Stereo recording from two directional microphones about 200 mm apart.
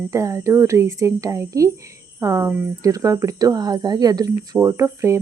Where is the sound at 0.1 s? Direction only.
15° right (ahead or behind).